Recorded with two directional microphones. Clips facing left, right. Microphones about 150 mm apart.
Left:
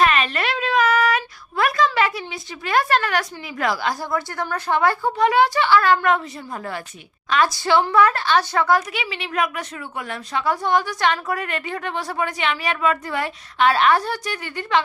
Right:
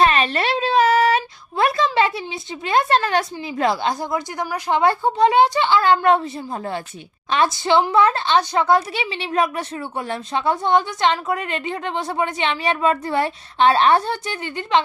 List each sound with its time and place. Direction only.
0.0 s a woman's voice: 30° right (ahead or behind)